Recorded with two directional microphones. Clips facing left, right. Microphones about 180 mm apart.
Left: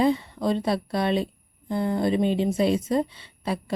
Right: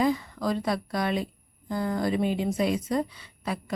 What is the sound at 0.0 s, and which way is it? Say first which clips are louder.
A woman's voice: left 3 dB; 25° left (ahead or behind).